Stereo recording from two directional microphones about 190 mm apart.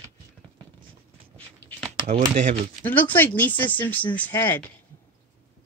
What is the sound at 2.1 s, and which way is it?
Speech, 40° right (ahead or behind).